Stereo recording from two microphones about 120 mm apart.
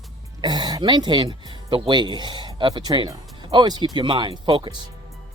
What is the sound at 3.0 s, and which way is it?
Music, 55° right (ahead or behind).